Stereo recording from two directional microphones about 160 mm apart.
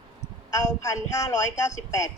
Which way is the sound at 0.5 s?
20° left (ahead or behind).